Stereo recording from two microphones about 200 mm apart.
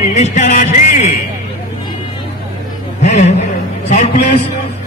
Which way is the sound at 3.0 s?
35° left (ahead or behind).